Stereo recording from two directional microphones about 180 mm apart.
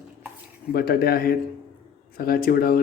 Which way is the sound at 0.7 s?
60° left (ahead or behind).